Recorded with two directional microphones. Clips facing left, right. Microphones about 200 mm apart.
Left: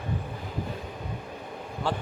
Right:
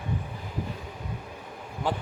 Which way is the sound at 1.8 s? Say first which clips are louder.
Right 1 dB; 15° right (ahead or behind).